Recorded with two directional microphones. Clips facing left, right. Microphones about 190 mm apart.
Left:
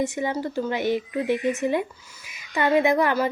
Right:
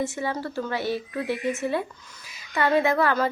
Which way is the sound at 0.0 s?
15° left (ahead or behind).